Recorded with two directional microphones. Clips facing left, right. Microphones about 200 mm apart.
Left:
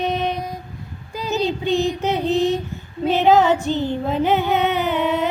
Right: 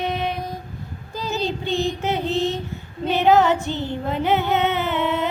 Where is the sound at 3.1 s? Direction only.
20° left (ahead or behind).